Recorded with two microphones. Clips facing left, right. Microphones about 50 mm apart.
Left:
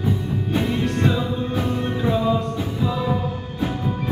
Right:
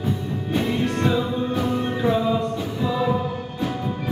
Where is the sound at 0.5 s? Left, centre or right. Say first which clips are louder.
Even; centre.